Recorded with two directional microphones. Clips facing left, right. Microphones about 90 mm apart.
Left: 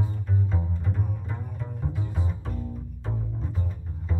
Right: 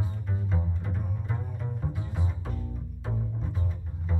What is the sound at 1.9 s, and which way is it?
Double bass, centre (ahead or behind).